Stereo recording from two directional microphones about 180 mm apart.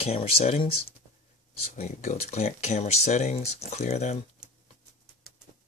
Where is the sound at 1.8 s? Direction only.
40° left (ahead or behind).